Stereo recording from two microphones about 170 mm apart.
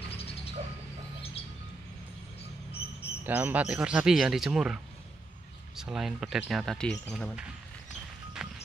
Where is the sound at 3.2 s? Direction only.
10° right (ahead or behind).